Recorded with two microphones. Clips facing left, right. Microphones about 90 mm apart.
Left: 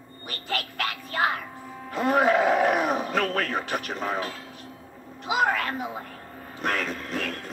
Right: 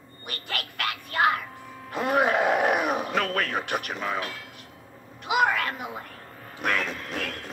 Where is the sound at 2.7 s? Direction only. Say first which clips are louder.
Left 1 dB; 5° right (ahead or behind).